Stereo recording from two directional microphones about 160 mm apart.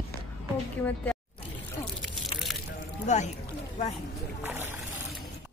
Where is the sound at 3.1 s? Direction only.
45° left (ahead or behind).